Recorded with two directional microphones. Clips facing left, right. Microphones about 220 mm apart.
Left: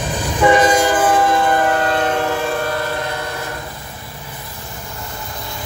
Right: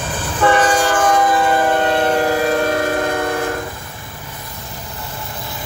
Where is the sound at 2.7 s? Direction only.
50° right (ahead or behind).